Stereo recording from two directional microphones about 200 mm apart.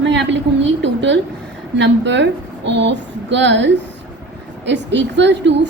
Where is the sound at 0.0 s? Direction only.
65° right (ahead or behind).